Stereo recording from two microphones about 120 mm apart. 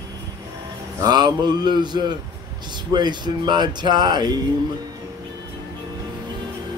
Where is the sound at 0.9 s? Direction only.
35° right (ahead or behind).